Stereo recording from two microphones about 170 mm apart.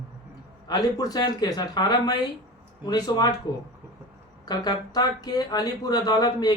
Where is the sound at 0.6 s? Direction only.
20° left (ahead or behind).